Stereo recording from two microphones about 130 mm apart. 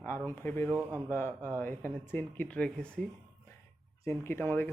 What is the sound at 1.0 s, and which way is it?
Speech, 15° left (ahead or behind).